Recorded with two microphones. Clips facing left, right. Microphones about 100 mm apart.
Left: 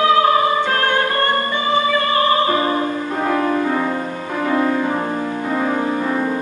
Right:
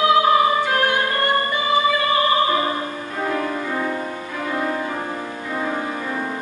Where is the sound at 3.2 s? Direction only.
40° left (ahead or behind).